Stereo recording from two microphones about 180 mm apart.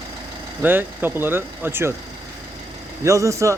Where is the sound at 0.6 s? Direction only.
10° right (ahead or behind).